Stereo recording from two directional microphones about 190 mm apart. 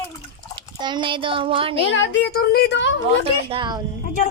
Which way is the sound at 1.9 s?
75° left (ahead or behind).